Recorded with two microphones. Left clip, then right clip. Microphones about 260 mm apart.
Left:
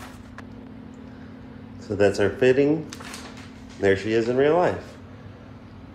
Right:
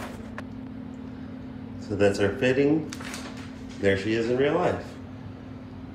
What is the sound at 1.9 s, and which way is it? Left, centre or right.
Speech, left.